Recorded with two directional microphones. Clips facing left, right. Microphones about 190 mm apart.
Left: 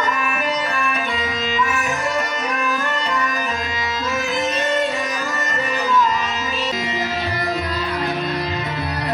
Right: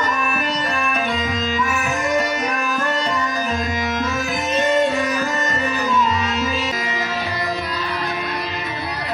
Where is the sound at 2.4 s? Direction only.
Centre (ahead or behind).